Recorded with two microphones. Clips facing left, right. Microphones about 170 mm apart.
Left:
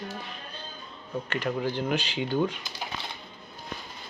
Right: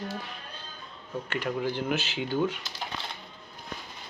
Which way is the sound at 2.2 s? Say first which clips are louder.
Left 1 dB; 15° left (ahead or behind).